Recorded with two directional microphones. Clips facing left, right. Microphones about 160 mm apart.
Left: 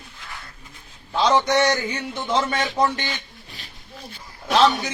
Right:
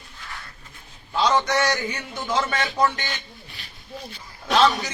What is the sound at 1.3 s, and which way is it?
A man's voice, 30° left (ahead or behind).